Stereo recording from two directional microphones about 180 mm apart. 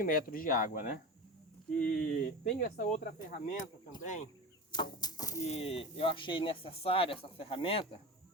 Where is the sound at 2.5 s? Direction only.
50° left (ahead or behind).